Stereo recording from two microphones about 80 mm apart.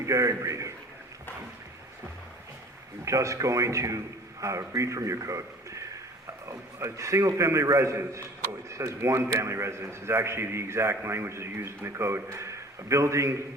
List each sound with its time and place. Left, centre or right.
0.0 s a man's voice: right
3.0 s a man's voice: right